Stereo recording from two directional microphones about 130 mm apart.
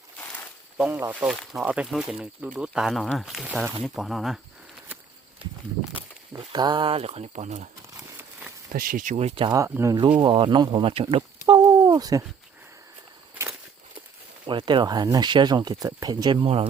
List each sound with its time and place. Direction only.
0.8 s speech: 15° right (ahead or behind)
6.3 s speech: 35° right (ahead or behind); by 7.7 s 60° right (ahead or behind)
8.8 s speech: 90° right; by 9.5 s 50° right (ahead or behind)
9.6 s speech: 15° right (ahead or behind)
10.2 s speech: 35° right (ahead or behind)
11.4 s a sound: 35° right (ahead or behind)
14.4 s speech: 35° right (ahead or behind)